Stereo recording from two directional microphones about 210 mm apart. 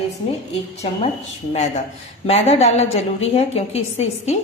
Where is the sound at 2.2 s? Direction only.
30° left (ahead or behind).